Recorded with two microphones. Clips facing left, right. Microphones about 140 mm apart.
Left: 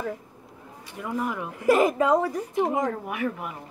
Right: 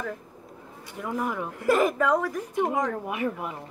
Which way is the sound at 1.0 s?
Centre (ahead or behind).